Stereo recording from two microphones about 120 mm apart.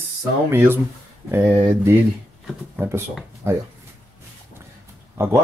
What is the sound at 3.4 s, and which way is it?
Speech, 20° right (ahead or behind).